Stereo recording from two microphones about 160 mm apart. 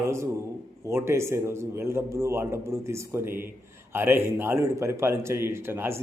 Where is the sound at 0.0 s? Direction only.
15° right (ahead or behind).